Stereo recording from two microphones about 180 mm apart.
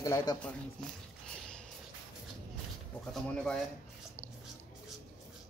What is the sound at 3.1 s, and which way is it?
Speech, centre (ahead or behind).